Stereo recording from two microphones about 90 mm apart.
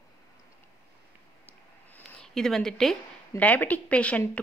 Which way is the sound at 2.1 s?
5° left (ahead or behind).